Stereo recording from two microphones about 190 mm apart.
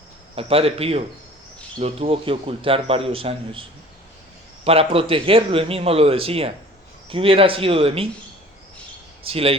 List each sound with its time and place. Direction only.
0.3 s a man's voice: 30° right (ahead or behind)
9.2 s speech: 30° right (ahead or behind)